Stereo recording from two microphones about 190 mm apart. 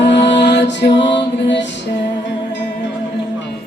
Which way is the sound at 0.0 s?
65° left (ahead or behind).